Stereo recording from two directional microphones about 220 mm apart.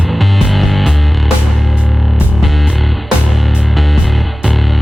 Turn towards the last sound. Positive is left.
turn(degrees=0)  # may be behind; listen again after turning